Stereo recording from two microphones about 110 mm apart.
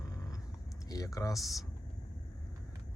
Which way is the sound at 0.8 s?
35° left (ahead or behind).